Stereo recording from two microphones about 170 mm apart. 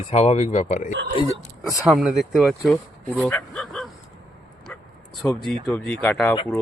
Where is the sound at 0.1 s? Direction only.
35° left (ahead or behind).